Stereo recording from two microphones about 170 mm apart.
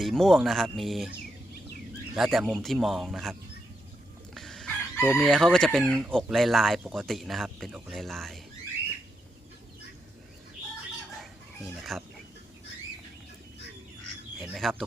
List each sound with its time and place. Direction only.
0.0 s speech: centre (ahead or behind)
2.1 s speech: 5° right (ahead or behind)
4.4 s chicken: centre (ahead or behind)
5.2 s speech: 5° left (ahead or behind)
11.8 s speech: centre (ahead or behind)
14.4 s speech: centre (ahead or behind)